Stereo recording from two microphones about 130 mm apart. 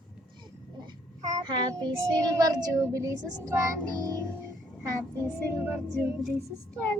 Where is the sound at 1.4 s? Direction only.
35° right (ahead or behind).